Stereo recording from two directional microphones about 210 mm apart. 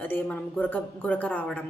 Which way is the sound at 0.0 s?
10° left (ahead or behind).